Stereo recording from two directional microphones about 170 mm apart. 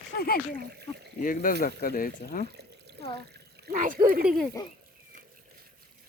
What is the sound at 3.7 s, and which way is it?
Speech, 50° right (ahead or behind).